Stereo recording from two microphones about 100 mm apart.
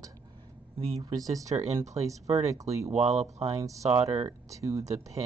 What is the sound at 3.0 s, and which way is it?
Speech, 90° right.